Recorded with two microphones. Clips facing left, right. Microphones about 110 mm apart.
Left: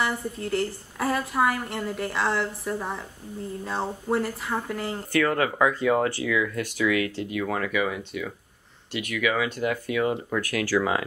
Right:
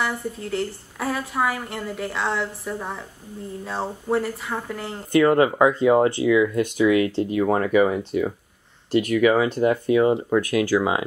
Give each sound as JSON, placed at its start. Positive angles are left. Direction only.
{"t": 0.0, "sound": "a woman's voice", "side_deg": 0}
{"t": 5.1, "sound": "speech", "side_deg": -25}